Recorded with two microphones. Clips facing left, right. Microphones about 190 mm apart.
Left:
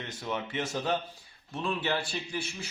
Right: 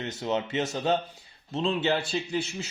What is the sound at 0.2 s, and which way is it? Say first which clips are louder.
A man's voice: right 5 dB; 25° right (ahead or behind).